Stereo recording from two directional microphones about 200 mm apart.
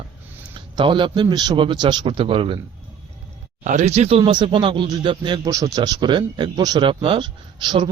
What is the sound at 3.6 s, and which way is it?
Speech, 40° right (ahead or behind).